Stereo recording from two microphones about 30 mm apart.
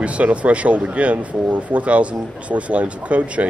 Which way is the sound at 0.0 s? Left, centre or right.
Right.